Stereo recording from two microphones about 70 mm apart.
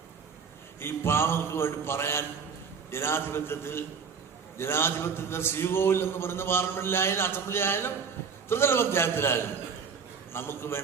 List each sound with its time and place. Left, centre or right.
0.8 s a man's voice: left